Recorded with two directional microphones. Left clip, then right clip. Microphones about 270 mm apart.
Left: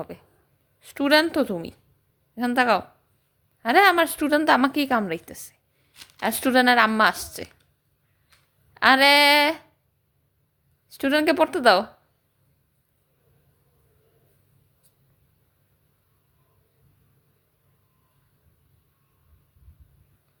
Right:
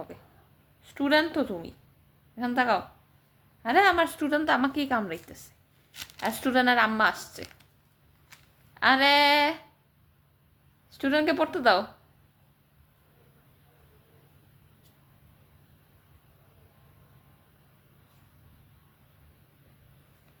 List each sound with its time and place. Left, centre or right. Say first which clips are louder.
0.8 s a woman's voice: left 5 dB; left
8.7 s a woman's voice: left 5 dB; left
10.8 s a woman's voice: left 4 dB; left